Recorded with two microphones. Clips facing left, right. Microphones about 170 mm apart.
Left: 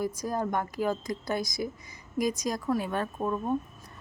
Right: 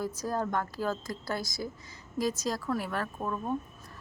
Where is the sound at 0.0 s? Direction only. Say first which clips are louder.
Left 2 dB; 15° left (ahead or behind).